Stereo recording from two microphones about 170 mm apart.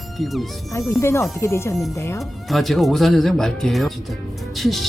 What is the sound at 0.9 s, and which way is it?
Speech, 15° left (ahead or behind).